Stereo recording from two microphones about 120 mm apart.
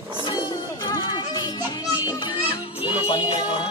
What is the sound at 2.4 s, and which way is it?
Music, 45° left (ahead or behind).